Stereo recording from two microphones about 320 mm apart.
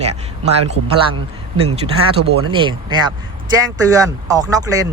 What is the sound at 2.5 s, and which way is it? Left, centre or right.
Speech, centre.